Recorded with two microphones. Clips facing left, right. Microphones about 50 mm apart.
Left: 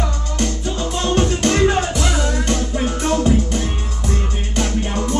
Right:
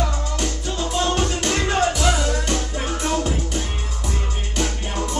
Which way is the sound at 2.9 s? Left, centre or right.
Centre.